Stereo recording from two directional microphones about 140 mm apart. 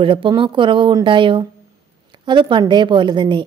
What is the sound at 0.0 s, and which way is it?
A woman's voice, 40° right (ahead or behind).